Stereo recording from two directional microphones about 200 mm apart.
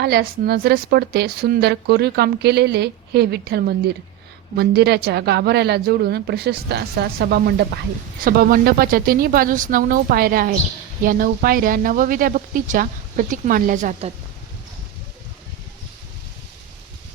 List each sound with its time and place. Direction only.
0.0 s a woman's voice: 50° right (ahead or behind)